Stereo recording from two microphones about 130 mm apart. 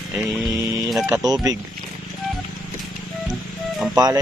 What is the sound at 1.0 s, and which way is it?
Speech, 25° right (ahead or behind).